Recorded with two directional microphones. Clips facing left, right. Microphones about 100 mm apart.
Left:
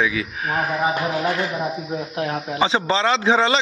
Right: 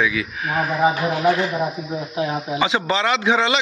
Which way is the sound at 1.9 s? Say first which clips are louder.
Right 4 dB; 5° right (ahead or behind).